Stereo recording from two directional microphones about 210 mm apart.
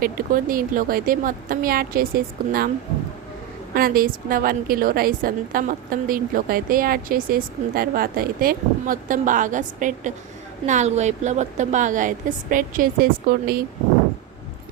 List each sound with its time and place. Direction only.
0.0 s a woman's voice: 40° right (ahead or behind)
3.8 s a woman's voice: 45° right (ahead or behind)